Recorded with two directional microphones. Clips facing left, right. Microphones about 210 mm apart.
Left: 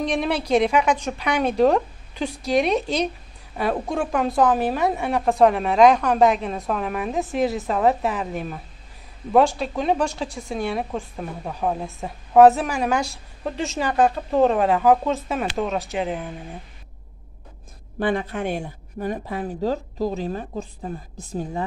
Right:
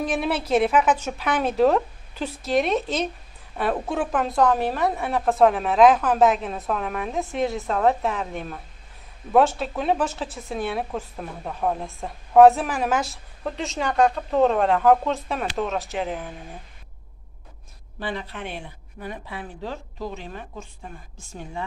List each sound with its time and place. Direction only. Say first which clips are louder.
0.0 s a woman's voice: left 2 dB; 5° right (ahead or behind)
17.9 s speech: left 8 dB; 50° left (ahead or behind)